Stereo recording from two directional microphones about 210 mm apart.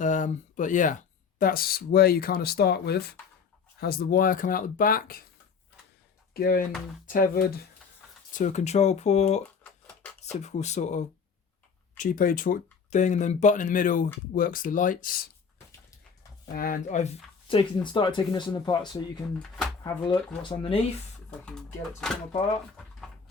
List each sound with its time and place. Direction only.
0.0 s speech: 35° left (ahead or behind)
6.3 s speech: 45° left (ahead or behind)
8.3 s speech: 35° left (ahead or behind)
9.8 s a sound: 5° left (ahead or behind)
10.3 s speech: 35° left (ahead or behind)
16.6 s speech: 40° left (ahead or behind)
17.5 s speech: 25° left (ahead or behind)